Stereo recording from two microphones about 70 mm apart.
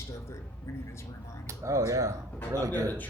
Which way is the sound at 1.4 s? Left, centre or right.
Right.